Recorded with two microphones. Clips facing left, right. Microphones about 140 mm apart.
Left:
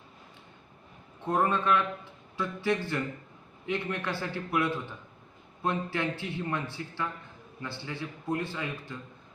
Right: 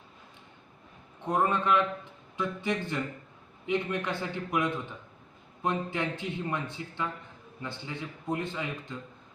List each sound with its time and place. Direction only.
1.2 s a man's voice: 15° right (ahead or behind)